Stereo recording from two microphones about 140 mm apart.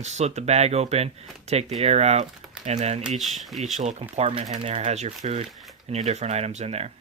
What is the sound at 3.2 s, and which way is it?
Speech, centre (ahead or behind).